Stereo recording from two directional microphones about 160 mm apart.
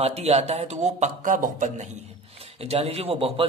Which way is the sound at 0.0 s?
40° right (ahead or behind).